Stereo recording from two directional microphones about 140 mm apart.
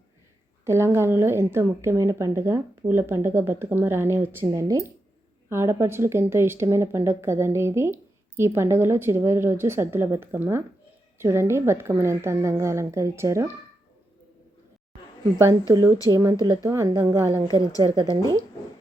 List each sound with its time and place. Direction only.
0.6 s a woman's voice: 20° right (ahead or behind)
15.4 s a woman's voice: 20° right (ahead or behind)
17.8 s a woman's voice: 35° right (ahead or behind)
18.1 s a woman's voice: 25° right (ahead or behind)